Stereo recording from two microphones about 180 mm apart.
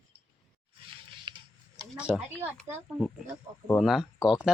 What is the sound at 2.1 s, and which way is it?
Speech, 5° right (ahead or behind).